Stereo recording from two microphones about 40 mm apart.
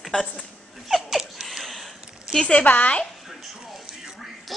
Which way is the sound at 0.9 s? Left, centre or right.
Centre.